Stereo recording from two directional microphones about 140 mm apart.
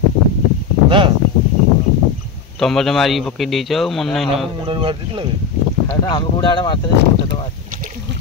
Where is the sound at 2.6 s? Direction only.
5° left (ahead or behind).